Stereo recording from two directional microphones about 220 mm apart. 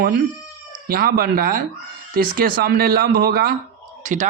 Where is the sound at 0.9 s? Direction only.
40° right (ahead or behind).